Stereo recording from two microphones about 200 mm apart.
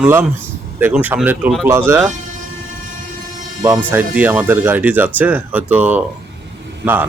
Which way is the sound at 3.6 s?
10° right (ahead or behind).